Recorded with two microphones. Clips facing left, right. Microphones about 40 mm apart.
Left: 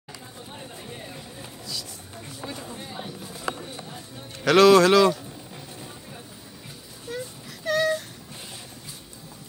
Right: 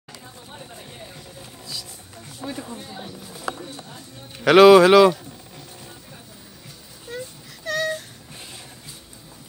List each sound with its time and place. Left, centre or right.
2.8 s speech: centre
4.5 s speech: centre
7.6 s a sound: centre